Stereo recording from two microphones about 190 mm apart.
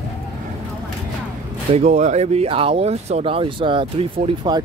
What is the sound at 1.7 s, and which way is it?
Speech, 35° right (ahead or behind).